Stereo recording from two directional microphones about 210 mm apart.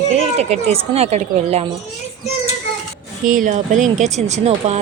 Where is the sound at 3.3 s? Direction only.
40° right (ahead or behind).